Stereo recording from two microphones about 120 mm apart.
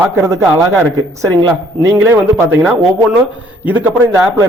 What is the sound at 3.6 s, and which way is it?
Speech, 15° right (ahead or behind).